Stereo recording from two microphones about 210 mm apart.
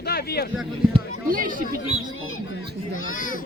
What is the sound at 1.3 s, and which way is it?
Speech, 40° right (ahead or behind).